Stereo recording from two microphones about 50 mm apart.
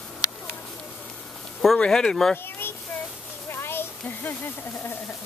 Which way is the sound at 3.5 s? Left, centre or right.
Left.